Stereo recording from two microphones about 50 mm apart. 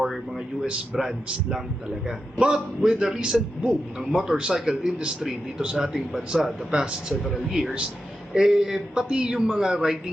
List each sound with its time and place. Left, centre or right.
0.3 s speech: centre
6.7 s a man's voice: right